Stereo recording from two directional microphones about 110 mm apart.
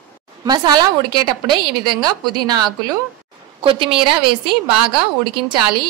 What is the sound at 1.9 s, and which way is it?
Speech, 40° right (ahead or behind).